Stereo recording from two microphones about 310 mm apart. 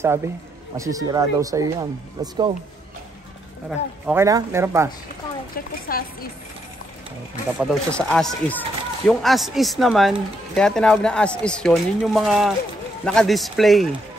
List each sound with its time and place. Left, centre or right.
0.0 s speech: centre
4.0 s speech: centre
5.9 s speech: left
7.5 s speech: centre